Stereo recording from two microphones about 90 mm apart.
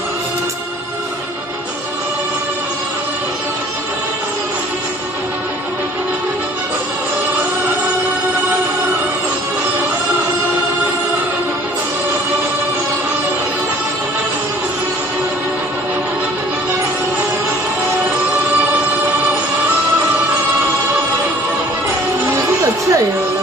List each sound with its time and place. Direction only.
22.3 s music: 35° right (ahead or behind)